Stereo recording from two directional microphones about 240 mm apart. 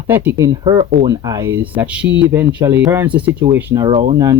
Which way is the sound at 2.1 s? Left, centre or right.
Right.